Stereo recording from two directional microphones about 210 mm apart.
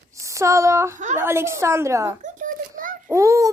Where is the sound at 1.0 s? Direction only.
35° right (ahead or behind).